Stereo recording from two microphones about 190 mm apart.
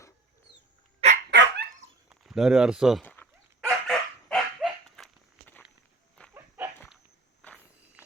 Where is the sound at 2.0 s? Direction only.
Centre (ahead or behind).